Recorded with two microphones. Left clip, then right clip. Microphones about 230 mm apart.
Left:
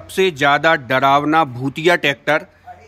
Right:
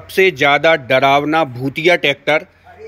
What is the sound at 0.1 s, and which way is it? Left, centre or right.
Speech, centre.